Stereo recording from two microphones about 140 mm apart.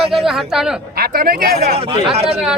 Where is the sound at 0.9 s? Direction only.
90° right.